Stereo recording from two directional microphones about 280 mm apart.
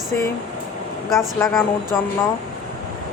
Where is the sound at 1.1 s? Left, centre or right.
Centre.